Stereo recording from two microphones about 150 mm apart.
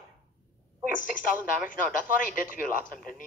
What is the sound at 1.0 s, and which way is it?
Speech, 65° left (ahead or behind).